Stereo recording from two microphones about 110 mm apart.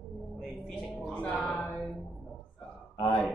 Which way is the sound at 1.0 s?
10° left (ahead or behind).